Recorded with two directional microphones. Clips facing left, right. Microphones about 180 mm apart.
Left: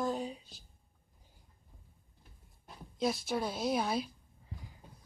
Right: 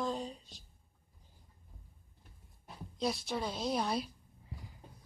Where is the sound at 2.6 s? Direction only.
Centre (ahead or behind).